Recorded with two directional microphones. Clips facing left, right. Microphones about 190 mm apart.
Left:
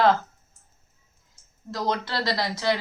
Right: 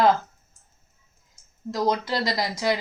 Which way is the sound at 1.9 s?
15° right (ahead or behind).